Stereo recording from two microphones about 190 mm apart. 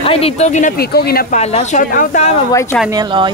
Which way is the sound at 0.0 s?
30° left (ahead or behind).